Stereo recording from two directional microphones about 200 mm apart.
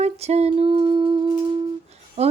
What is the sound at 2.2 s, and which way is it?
Speech, 30° right (ahead or behind).